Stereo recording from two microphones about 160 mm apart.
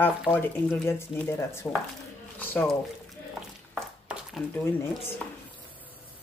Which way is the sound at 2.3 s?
5° left (ahead or behind).